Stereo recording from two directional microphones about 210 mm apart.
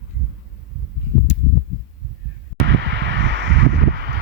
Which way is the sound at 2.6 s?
55° right (ahead or behind).